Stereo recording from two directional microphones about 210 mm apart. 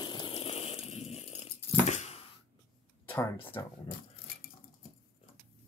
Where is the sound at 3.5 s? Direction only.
15° left (ahead or behind).